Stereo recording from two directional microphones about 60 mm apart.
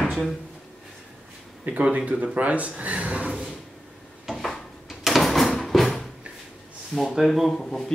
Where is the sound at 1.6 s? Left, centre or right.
Right.